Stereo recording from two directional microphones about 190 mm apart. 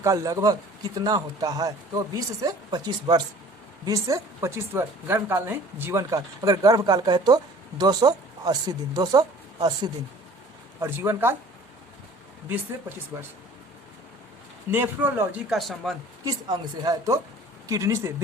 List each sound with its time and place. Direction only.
0.0 s a woman's voice: 20° right (ahead or behind)
13.1 s speech: 10° right (ahead or behind)
14.7 s speech: 10° right (ahead or behind)
15.5 s speech: centre (ahead or behind)
16.2 s a woman's voice: 20° right (ahead or behind)